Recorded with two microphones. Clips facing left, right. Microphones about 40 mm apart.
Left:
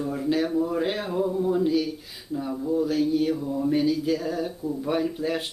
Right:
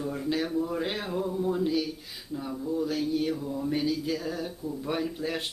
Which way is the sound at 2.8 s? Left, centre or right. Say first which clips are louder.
Left 5 dB; centre.